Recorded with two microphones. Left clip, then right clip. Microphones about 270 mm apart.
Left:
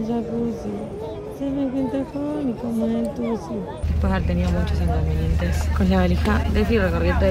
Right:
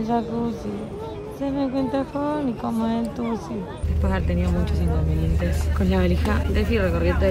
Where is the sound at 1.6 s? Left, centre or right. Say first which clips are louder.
Right 1 dB; right.